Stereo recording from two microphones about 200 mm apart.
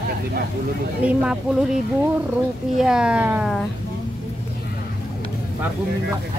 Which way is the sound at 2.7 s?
5° right (ahead or behind).